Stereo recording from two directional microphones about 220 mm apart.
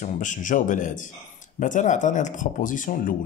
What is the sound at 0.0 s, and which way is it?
Speech, 35° left (ahead or behind).